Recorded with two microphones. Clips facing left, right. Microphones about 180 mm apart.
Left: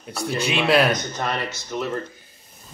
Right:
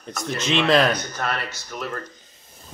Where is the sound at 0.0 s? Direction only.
10° left (ahead or behind).